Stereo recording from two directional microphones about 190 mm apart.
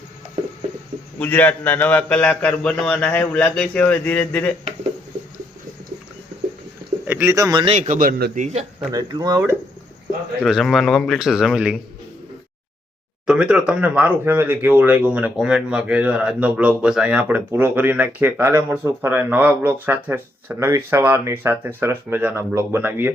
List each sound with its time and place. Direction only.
1.2 s a man's voice: 10° left (ahead or behind)
7.1 s speech: 10° right (ahead or behind)
7.6 s a man's voice: 35° right (ahead or behind)
8.9 s speech: 20° right (ahead or behind)
10.4 s speech: centre (ahead or behind)
13.2 s speech: 5° right (ahead or behind)